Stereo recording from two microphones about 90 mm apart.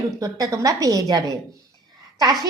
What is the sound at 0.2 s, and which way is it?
A woman's voice, 40° right (ahead or behind).